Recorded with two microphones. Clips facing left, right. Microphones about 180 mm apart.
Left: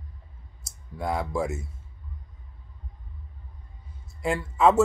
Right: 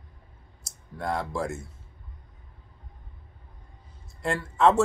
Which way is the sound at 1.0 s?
5° left (ahead or behind).